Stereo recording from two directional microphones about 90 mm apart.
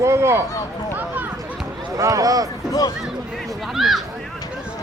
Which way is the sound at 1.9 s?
40° right (ahead or behind).